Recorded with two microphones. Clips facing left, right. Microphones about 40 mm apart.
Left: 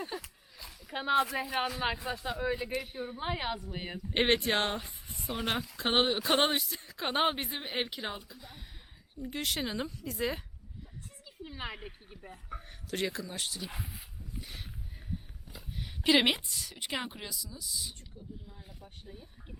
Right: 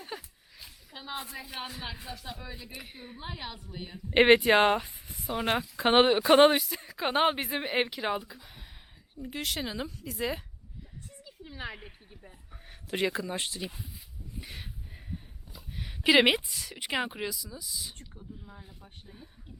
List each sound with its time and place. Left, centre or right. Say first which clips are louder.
0.1 s speech: left 1 dB; centre
1.1 s a woman's voice: left 11 dB; left
1.8 s a man's voice: left 7 dB; left
2.7 s speech: left 8 dB; centre
3.2 s a woman's voice: left 6 dB; left
4.1 s speech: right 8 dB; centre
5.0 s a sound: right 4 dB; centre
5.5 s speech: right 6 dB; centre
11.2 s a sound: even; centre
11.7 s speech: left 1 dB; centre
12.9 s speech: right 5 dB; centre
13.7 s speech: left 1 dB; left
14.4 s a sound: right 2 dB; centre
15.7 s speech: right 4 dB; centre